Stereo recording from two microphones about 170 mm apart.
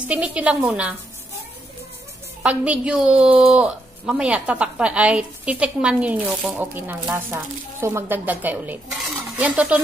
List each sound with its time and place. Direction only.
0.1 s a woman's voice: 5° right (ahead or behind)
2.4 s a woman's voice: 5° right (ahead or behind)